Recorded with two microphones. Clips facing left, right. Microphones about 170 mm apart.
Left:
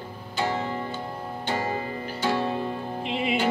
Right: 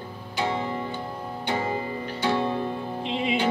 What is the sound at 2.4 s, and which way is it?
Music, 10° left (ahead or behind).